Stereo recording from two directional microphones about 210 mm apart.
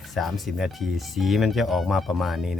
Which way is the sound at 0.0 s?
Centre (ahead or behind).